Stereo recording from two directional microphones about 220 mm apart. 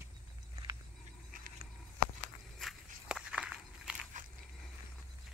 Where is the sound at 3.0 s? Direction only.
5° right (ahead or behind).